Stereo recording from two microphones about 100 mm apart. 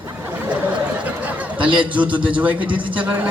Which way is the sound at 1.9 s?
15° right (ahead or behind).